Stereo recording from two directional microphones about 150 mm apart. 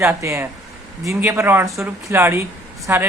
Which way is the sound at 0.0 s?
20° right (ahead or behind).